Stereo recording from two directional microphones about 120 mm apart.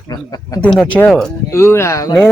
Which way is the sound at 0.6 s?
10° left (ahead or behind).